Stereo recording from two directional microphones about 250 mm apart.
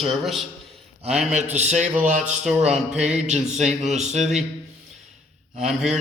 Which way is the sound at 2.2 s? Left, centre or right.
Centre.